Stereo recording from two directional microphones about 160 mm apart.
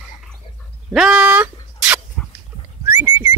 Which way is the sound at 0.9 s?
5° right (ahead or behind).